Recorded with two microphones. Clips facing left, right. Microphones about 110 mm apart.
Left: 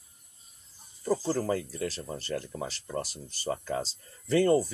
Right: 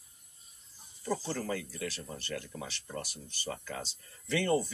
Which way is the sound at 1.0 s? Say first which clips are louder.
Left 6 dB; 40° left (ahead or behind).